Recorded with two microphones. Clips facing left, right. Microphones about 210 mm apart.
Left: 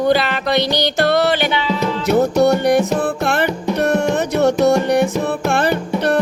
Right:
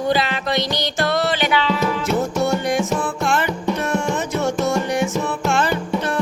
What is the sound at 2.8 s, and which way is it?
Music, 35° left (ahead or behind).